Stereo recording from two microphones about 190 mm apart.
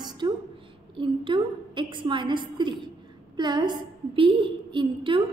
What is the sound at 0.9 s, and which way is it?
A woman's voice, 25° right (ahead or behind).